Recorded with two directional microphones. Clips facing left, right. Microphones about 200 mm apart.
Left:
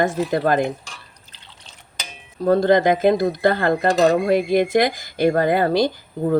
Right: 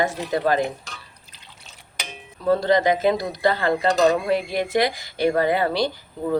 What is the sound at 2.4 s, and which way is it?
Speech, 50° left (ahead or behind).